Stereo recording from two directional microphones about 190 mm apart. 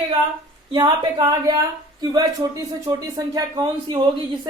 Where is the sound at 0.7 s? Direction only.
20° right (ahead or behind).